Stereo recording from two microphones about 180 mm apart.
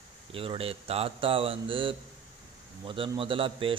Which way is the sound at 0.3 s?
30° right (ahead or behind).